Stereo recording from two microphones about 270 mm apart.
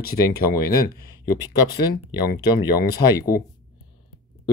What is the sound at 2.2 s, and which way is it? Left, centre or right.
Speech, left.